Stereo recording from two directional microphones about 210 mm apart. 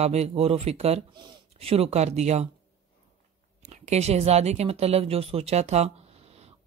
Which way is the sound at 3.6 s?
35° right (ahead or behind).